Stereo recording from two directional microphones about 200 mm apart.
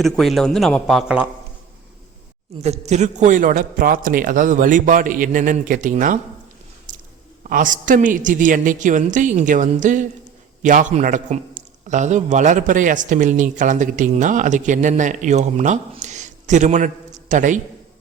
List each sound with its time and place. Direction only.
0.0 s a man's voice: centre (ahead or behind)
2.6 s a man's voice: 35° right (ahead or behind)
6.9 s chewing: 40° right (ahead or behind)
7.5 s a man's voice: 40° right (ahead or behind)